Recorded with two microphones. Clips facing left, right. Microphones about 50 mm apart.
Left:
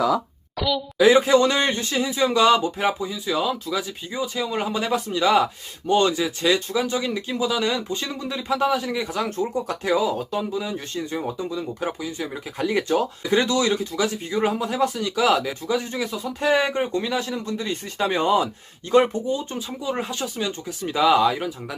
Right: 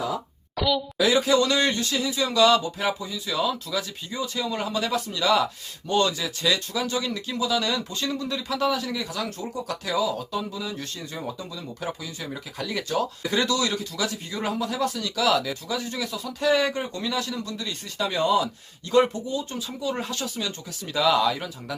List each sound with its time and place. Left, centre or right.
0.5 s a woman's voice: centre
0.9 s speech: left